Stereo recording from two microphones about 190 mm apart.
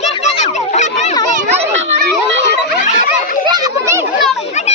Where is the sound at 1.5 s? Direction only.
35° right (ahead or behind).